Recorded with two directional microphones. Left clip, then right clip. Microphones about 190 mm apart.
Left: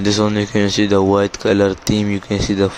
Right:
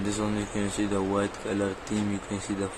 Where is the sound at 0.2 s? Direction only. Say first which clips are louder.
Left 14 dB; 50° left (ahead or behind).